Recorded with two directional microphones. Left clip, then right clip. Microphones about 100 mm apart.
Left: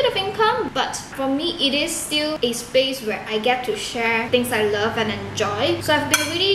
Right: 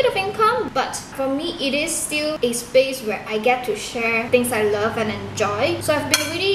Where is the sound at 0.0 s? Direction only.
Centre (ahead or behind).